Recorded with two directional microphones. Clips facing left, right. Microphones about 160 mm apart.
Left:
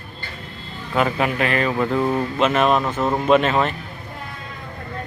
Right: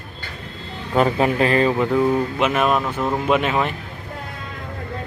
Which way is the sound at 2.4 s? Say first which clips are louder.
Left 1 dB; 10° right (ahead or behind).